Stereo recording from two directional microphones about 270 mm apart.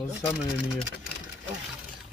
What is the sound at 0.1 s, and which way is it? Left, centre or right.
Speech, centre.